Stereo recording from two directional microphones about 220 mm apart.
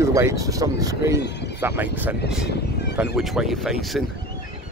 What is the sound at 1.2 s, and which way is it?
Speech, 50° left (ahead or behind).